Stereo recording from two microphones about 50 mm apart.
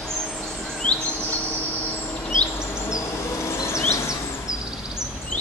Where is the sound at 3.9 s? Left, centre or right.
Left.